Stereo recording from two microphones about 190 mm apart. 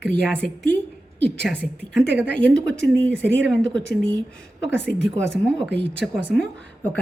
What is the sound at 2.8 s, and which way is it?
Speech, 75° right (ahead or behind).